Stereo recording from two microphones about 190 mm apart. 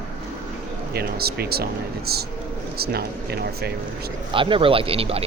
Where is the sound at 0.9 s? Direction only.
55° right (ahead or behind).